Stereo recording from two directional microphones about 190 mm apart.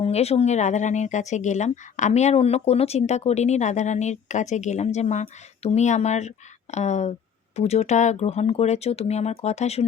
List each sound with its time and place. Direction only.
0.0 s speech: 35° left (ahead or behind)